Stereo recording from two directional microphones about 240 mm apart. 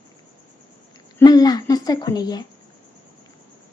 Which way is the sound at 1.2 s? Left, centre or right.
Centre.